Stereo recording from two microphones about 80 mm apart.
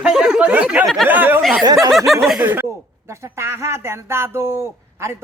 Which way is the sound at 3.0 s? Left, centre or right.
Right.